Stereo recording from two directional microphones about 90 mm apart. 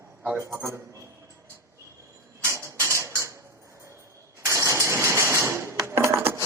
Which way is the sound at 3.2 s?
35° right (ahead or behind).